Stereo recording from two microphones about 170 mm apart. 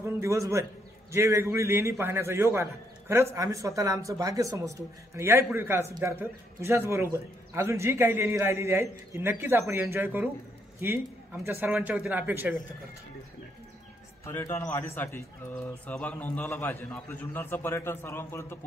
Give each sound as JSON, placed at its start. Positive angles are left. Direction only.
{"t": 0.0, "sound": "a man's voice", "side_deg": -15}
{"t": 14.2, "sound": "speech", "side_deg": 15}